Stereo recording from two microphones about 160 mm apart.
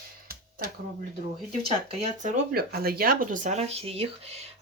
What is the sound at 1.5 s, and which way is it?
Speech, 45° right (ahead or behind).